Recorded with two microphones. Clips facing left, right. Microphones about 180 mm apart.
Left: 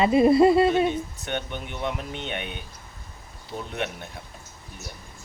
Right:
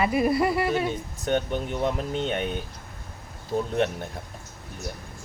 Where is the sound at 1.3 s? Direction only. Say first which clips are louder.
Right 10 dB; 35° right (ahead or behind).